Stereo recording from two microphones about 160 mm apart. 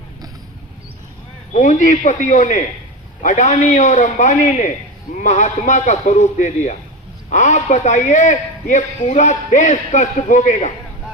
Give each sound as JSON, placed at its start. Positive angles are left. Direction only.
{"t": 1.5, "sound": "a man's voice", "side_deg": 50}